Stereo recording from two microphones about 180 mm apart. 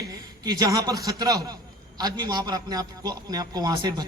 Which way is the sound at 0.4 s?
20° right (ahead or behind).